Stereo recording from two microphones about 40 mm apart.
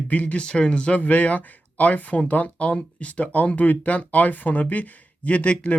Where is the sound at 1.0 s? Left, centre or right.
Left.